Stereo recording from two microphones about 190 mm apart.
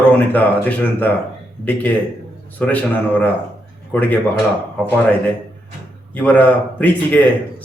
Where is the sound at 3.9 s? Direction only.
10° left (ahead or behind).